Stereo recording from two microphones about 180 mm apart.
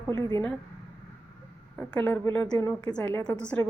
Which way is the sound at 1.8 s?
10° left (ahead or behind).